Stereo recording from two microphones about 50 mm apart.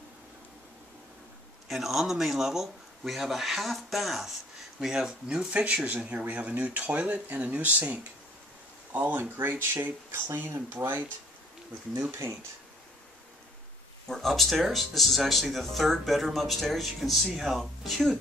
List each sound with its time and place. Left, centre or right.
1.7 s speech: centre
5.5 s speech: right
9.4 s speech: right
11.9 s speech: right
14.0 s speech: centre